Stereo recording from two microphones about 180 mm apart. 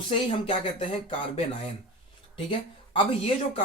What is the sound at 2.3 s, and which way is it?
Speech, 30° left (ahead or behind).